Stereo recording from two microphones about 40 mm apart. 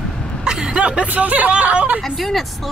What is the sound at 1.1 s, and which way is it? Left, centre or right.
Speech, right.